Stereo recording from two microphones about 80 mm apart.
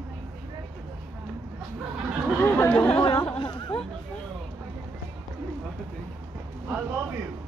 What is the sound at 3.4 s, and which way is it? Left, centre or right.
Chatter, left.